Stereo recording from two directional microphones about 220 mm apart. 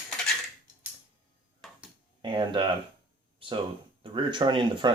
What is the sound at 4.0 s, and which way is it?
Speech, 20° right (ahead or behind).